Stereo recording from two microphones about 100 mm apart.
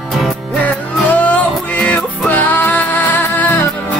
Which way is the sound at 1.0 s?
15° left (ahead or behind).